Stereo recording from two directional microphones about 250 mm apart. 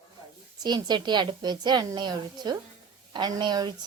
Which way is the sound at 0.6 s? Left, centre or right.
Centre.